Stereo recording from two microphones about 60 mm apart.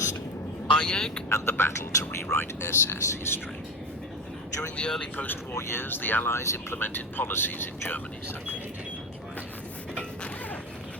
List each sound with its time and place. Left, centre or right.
0.7 s speech: centre
1.3 s speech: left
4.8 s speech: centre
5.1 s speech: left
6.3 s speech: left
6.8 s speech: left